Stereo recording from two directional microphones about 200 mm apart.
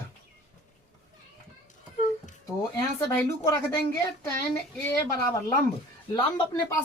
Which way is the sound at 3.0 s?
15° left (ahead or behind).